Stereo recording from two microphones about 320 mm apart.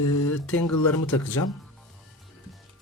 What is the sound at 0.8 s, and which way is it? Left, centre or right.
Speech, centre.